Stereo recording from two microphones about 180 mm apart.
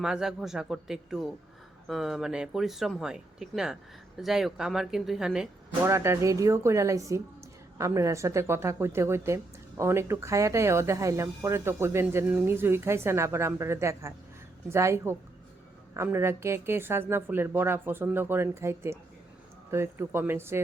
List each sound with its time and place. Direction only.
0.0 s speech: 5° right (ahead or behind)
5.8 s speech: 15° right (ahead or behind)